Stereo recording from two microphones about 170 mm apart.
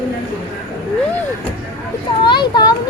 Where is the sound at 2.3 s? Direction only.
25° left (ahead or behind).